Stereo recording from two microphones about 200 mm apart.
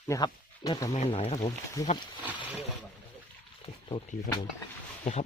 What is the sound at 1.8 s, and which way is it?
Speech, 15° left (ahead or behind).